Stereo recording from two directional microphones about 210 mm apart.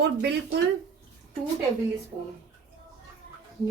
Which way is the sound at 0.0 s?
50° right (ahead or behind).